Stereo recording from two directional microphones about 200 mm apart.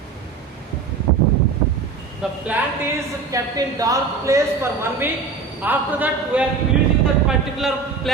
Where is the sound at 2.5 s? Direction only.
15° right (ahead or behind).